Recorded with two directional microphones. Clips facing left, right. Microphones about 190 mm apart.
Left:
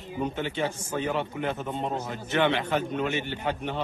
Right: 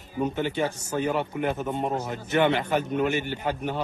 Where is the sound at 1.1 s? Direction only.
10° right (ahead or behind).